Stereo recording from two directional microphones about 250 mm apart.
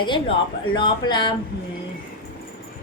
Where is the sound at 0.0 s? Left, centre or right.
Centre.